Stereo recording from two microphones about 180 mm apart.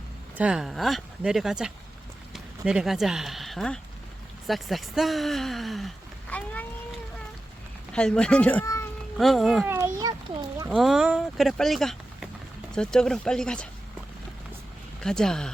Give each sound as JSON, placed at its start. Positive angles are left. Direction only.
{"t": 0.3, "sound": "speech", "side_deg": -5}
{"t": 6.3, "sound": "a sound", "side_deg": 10}
{"t": 7.9, "sound": "speech", "side_deg": 5}
{"t": 9.6, "sound": "a sound", "side_deg": -15}
{"t": 10.7, "sound": "speech", "side_deg": 0}
{"t": 15.0, "sound": "speech", "side_deg": 5}